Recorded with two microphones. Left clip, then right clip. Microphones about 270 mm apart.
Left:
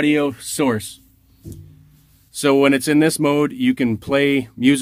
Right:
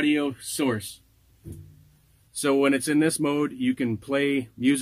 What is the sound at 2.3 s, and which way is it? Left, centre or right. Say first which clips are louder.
Speech: left 7 dB; left.